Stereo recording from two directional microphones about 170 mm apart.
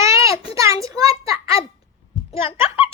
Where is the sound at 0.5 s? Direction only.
20° right (ahead or behind).